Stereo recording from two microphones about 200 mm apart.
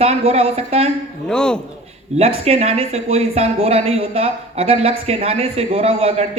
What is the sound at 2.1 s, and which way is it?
Speech, 30° right (ahead or behind).